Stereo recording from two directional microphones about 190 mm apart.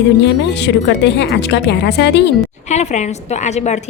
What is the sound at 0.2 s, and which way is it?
Speech, 65° left (ahead or behind).